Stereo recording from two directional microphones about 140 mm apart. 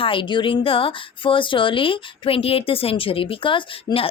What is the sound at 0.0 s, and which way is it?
Speech, 40° left (ahead or behind).